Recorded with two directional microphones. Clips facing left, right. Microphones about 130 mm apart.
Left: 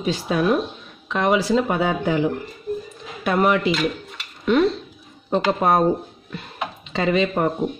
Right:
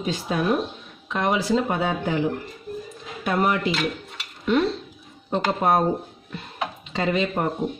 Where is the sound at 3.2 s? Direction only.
75° left (ahead or behind).